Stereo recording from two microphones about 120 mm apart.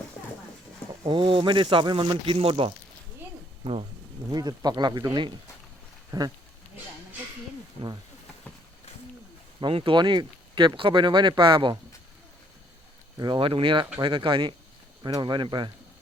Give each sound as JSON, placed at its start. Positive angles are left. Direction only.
{"t": 1.0, "sound": "speech", "side_deg": -45}
{"t": 4.3, "sound": "speech", "side_deg": -35}
{"t": 6.1, "sound": "speech", "side_deg": -30}
{"t": 7.8, "sound": "speech", "side_deg": 50}
{"t": 9.6, "sound": "speech", "side_deg": -45}
{"t": 13.1, "sound": "speech", "side_deg": -40}